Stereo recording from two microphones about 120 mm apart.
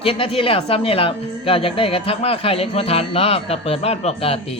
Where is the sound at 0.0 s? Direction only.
50° left (ahead or behind).